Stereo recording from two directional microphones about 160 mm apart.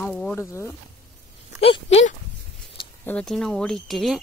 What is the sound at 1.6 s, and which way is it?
Speech, 40° left (ahead or behind).